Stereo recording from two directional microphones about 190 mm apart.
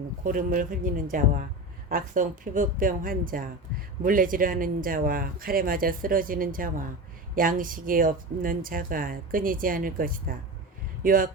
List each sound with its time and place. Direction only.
0.3 s speech: 45° right (ahead or behind)